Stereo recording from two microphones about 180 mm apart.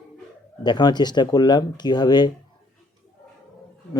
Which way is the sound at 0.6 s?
25° left (ahead or behind).